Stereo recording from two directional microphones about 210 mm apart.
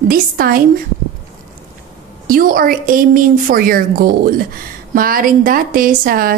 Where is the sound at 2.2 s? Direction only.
45° right (ahead or behind).